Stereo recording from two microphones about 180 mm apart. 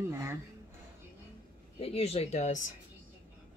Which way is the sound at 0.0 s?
15° right (ahead or behind).